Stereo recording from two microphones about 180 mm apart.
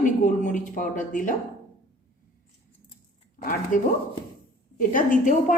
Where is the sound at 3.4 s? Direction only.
50° left (ahead or behind).